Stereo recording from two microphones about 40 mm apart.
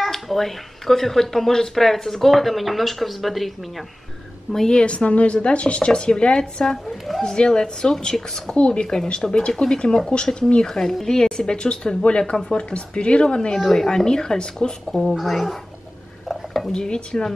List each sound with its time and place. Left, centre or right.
0.0 s speech: centre
4.6 s speech: left
6.9 s speech: centre
7.2 s speech: centre
8.5 s speech: left
8.8 s speech: centre
11.1 s speech: centre
13.6 s speech: centre
16.3 s dishes: centre
16.7 s speech: centre